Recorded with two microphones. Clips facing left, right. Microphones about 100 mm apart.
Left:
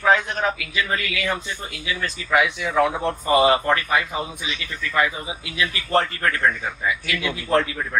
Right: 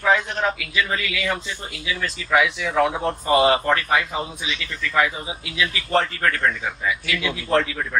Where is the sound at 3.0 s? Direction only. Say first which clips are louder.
Even; 15° left (ahead or behind).